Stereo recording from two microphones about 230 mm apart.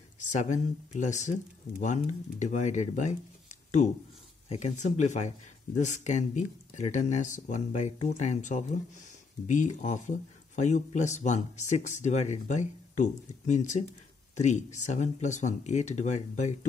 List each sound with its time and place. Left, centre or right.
0.2 s speech: left
4.5 s speech: left